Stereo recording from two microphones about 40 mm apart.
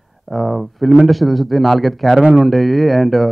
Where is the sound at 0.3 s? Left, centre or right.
Centre.